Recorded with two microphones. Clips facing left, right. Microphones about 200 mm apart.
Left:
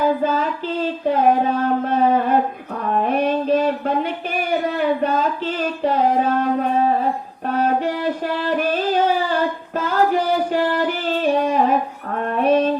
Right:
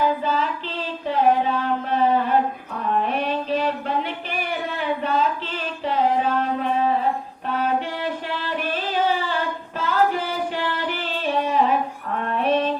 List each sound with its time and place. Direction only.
0.2 s child singing: 45° left (ahead or behind)
2.9 s a sound: 45° left (ahead or behind)
7.4 s music: 40° left (ahead or behind)
12.4 s mantra: 45° left (ahead or behind)